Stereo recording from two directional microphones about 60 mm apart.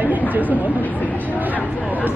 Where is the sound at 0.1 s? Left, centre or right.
Right.